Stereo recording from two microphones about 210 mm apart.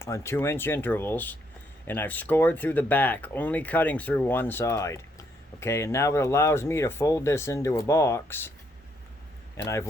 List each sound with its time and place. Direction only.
0.0 s speech: 15° left (ahead or behind)
9.6 s speech: 15° left (ahead or behind)